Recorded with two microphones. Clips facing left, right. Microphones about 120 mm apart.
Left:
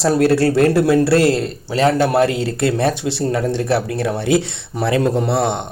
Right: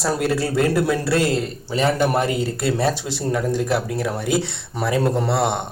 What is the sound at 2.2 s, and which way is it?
Speech, 80° left.